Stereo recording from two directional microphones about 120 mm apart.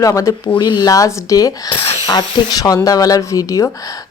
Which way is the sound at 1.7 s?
45° left (ahead or behind).